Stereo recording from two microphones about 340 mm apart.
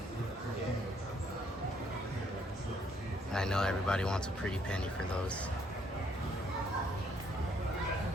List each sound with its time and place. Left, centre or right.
3.3 s speech: centre